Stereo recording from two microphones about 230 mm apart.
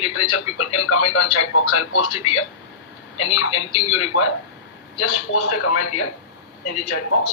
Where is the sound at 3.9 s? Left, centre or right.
Left.